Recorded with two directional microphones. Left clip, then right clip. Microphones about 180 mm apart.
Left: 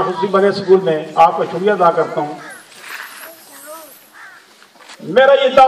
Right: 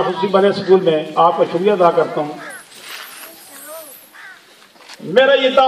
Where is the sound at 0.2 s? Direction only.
40° left (ahead or behind).